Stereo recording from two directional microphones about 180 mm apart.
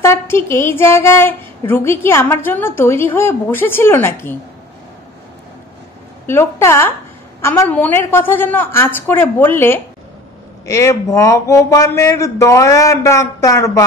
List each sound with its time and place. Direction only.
0.0 s a woman's voice: 15° left (ahead or behind)
6.2 s a woman's voice: 15° left (ahead or behind)